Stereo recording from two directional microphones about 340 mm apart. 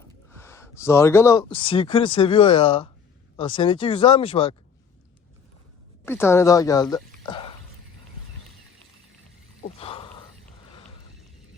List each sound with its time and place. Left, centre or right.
0.3 s speech: centre
6.1 s a woman's voice: centre
9.6 s a sound: centre